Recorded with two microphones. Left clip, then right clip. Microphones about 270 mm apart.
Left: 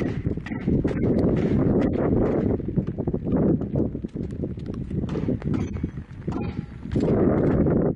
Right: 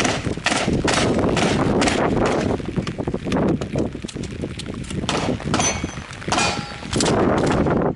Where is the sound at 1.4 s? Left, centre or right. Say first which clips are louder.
Right 5 dB; centre.